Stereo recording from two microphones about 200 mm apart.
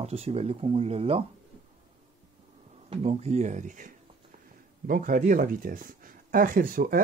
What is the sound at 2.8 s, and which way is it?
Speech, 30° right (ahead or behind).